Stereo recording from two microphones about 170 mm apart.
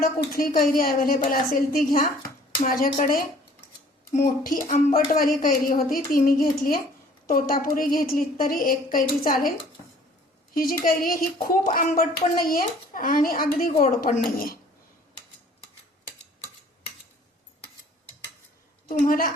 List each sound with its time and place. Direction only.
0.0 s speech: 55° left (ahead or behind)
10.5 s speech: 55° left (ahead or behind)
18.9 s speech: 55° left (ahead or behind)